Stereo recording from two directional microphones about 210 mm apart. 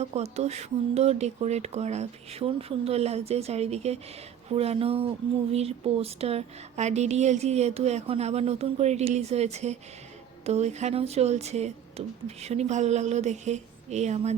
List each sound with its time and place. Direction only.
0.0 s speech: 30° right (ahead or behind)